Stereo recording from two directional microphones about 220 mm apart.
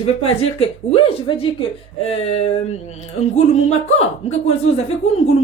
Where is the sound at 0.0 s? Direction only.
25° left (ahead or behind).